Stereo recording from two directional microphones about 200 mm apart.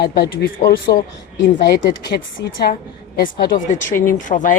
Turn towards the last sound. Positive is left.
turn(degrees=40)  # may be behind; listen again after turning